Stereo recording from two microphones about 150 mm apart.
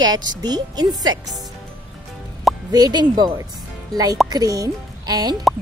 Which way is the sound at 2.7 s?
25° right (ahead or behind).